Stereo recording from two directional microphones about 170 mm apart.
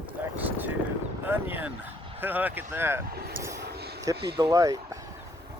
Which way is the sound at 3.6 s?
70° right (ahead or behind).